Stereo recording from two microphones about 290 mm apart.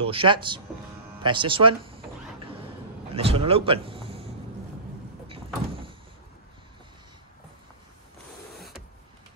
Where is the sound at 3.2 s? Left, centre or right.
Centre.